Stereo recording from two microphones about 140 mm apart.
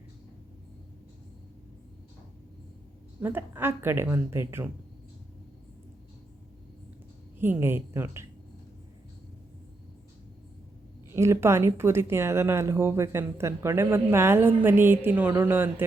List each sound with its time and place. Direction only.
3.2 s speech: 15° right (ahead or behind)
7.3 s speech: 15° right (ahead or behind)
11.1 s speech: 20° right (ahead or behind)